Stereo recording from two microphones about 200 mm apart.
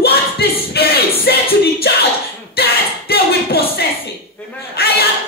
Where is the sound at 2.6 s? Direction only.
50° left (ahead or behind).